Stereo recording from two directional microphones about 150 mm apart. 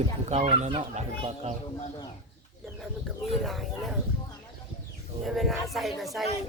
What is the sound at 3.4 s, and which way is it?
Speech, centre (ahead or behind).